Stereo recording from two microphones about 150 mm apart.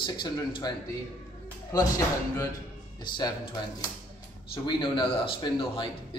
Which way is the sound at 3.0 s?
30° left (ahead or behind).